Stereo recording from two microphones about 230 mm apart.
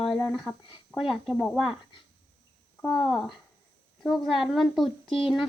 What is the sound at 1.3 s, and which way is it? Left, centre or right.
Speech, centre.